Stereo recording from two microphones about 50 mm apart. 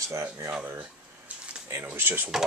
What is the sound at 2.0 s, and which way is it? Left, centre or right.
Speech, right.